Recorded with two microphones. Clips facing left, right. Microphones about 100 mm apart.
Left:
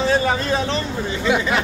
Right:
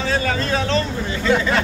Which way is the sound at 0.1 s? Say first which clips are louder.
Left 2 dB; 20° left (ahead or behind).